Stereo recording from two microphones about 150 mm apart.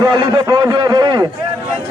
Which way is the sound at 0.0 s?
30° right (ahead or behind).